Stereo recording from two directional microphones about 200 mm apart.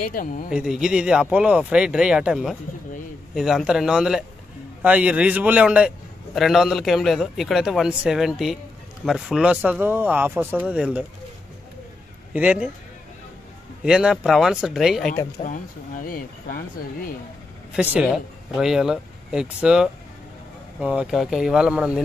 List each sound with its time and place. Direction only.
0.1 s speech: 40° left (ahead or behind)
0.5 s a man's voice: 5° right (ahead or behind)
12.3 s speech: 5° right (ahead or behind)
13.8 s a man's voice: 5° right (ahead or behind)
15.4 s speech: 40° left (ahead or behind)
17.7 s a man's voice: 5° right (ahead or behind)